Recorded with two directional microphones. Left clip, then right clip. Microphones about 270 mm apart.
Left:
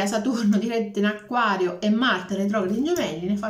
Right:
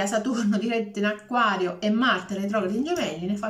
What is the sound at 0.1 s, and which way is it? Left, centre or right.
Speech, centre.